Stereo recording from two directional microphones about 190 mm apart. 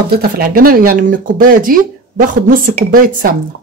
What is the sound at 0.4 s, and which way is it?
Speech, 50° right (ahead or behind).